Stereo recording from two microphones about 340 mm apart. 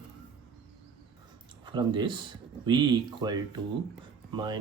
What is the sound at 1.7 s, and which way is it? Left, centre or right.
Speech, centre.